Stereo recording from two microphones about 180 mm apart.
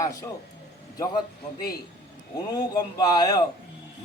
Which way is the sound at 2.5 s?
20° left (ahead or behind).